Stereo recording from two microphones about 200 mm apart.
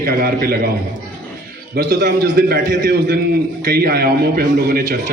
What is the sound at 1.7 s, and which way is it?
A man's voice, 55° right (ahead or behind).